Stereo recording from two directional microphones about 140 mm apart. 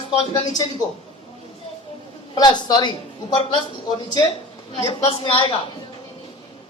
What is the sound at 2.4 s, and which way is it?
A man's voice, 30° left (ahead or behind).